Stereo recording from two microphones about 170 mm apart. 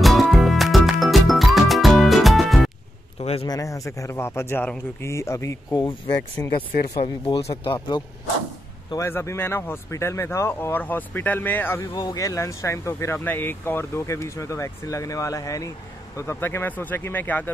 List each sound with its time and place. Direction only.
0.0 s music: centre (ahead or behind)
3.2 s a sound: 35° left (ahead or behind)
3.4 s speech: 20° left (ahead or behind)
7.0 s speech: 35° left (ahead or behind)
8.9 s speech: 15° left (ahead or behind)
11.9 s speech: 20° left (ahead or behind)